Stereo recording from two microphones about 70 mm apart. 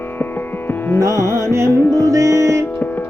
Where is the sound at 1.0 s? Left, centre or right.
Right.